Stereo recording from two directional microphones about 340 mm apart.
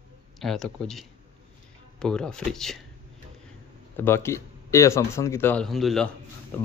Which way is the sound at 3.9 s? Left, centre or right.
Centre.